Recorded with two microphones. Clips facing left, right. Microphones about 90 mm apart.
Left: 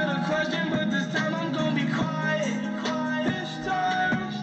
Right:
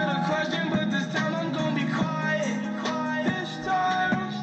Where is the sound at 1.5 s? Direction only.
35° right (ahead or behind).